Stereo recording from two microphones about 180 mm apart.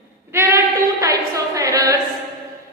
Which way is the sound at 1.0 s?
20° right (ahead or behind).